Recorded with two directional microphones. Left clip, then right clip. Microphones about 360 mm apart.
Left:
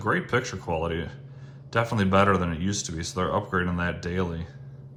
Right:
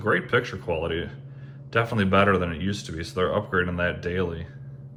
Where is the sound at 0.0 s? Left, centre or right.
Centre.